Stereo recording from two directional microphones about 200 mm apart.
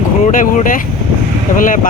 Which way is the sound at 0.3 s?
40° left (ahead or behind).